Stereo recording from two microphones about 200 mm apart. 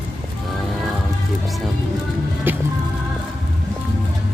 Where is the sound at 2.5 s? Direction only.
10° right (ahead or behind).